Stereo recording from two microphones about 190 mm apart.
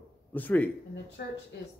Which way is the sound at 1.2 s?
55° left (ahead or behind).